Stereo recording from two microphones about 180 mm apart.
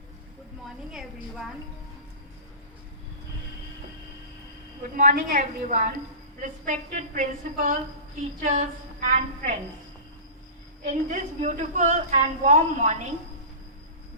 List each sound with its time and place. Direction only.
0.9 s a woman's voice: 5° right (ahead or behind)
4.8 s a woman's voice: 45° right (ahead or behind)
10.8 s a woman's voice: 40° right (ahead or behind)